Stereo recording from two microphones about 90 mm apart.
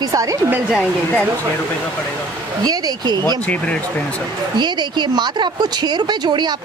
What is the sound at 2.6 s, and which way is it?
Speech, 50° right (ahead or behind).